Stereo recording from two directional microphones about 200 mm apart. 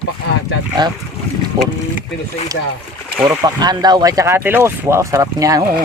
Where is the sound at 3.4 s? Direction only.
20° right (ahead or behind).